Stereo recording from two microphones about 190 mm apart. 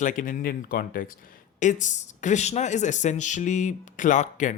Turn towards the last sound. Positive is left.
turn(degrees=40)  # may be behind; listen again after turning